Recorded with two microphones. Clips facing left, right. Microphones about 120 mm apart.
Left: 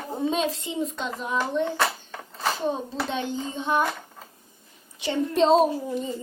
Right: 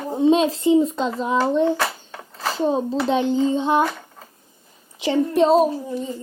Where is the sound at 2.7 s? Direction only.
30° right (ahead or behind).